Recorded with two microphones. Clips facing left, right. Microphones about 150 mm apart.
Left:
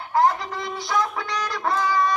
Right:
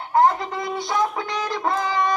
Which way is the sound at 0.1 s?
25° right (ahead or behind).